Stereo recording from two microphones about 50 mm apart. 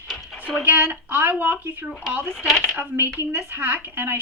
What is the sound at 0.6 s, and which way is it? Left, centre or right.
A woman's voice, right.